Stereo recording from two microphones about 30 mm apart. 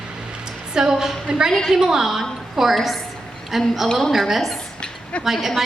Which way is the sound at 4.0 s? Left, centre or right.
Centre.